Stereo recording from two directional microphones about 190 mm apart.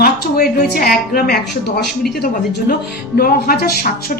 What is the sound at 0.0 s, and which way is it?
A woman's voice, 55° left (ahead or behind).